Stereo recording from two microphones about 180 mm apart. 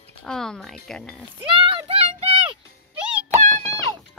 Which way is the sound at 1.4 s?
30° right (ahead or behind).